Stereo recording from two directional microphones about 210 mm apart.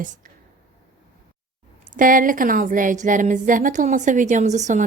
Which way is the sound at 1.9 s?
40° right (ahead or behind).